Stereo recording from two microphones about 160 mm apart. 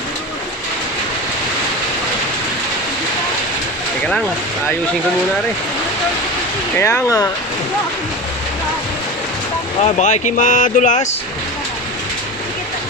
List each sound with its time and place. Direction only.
6.7 s speech: 15° left (ahead or behind)
9.8 s speech: 50° left (ahead or behind)